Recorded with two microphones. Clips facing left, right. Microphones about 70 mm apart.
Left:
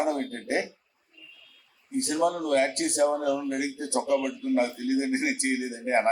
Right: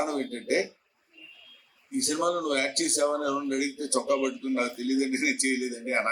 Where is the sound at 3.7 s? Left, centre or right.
Left.